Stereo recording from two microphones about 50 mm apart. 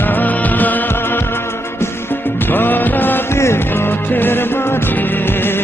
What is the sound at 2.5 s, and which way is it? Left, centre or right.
Music, left.